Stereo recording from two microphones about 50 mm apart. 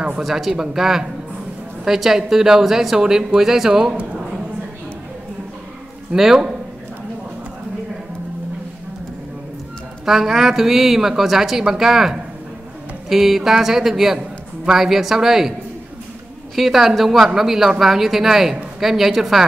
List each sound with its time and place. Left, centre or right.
0.2 s a woman's voice: centre
3.9 s a woman's voice: right
6.1 s a woman's voice: centre
10.0 s a woman's voice: centre
16.5 s speech: centre